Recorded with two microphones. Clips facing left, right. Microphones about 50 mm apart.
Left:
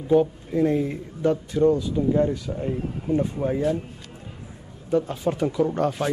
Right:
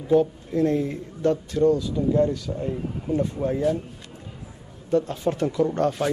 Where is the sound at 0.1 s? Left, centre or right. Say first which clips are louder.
Even; centre.